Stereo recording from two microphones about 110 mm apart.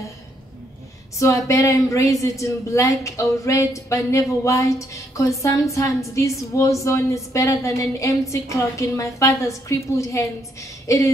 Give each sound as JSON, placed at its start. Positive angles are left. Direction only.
{"t": 1.1, "sound": "a woman's voice", "side_deg": 30}